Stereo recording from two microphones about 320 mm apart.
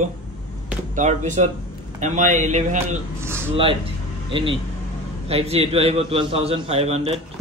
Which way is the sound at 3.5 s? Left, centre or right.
Centre.